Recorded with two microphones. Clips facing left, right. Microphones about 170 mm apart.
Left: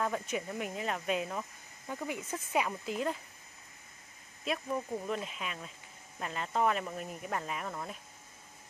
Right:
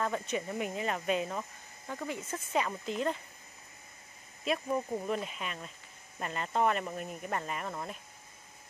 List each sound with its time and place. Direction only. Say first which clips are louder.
0.0 s speech: right 1 dB; 5° left (ahead or behind)
4.6 s speech: right 2 dB; 10° right (ahead or behind)